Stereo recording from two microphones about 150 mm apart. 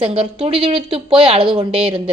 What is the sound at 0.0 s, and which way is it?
A woman's voice, 40° right (ahead or behind).